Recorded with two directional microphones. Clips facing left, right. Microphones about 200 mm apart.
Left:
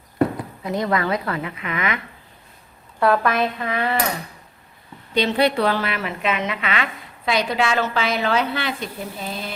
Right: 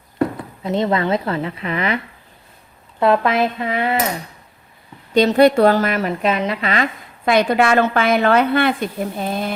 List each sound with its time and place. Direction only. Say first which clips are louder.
0.6 s a woman's voice: right 4 dB; 25° right (ahead or behind)
3.0 s a woman's voice: right 3 dB; 25° right (ahead or behind)
5.1 s a woman's voice: right 7 dB; 45° right (ahead or behind)
7.3 s a woman's voice: right 6 dB; 55° right (ahead or behind)